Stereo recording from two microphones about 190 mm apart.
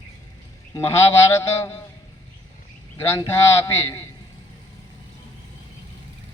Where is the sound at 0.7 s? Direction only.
15° left (ahead or behind).